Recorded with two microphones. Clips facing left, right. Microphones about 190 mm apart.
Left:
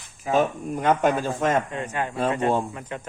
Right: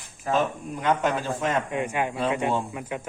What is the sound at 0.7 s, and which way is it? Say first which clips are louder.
Speech: left 3 dB; 50° left (ahead or behind).